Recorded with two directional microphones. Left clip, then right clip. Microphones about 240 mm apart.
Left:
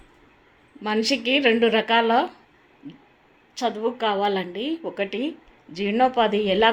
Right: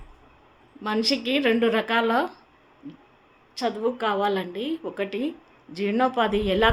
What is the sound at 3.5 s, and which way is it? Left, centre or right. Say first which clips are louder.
A woman's voice: left 1 dB; centre.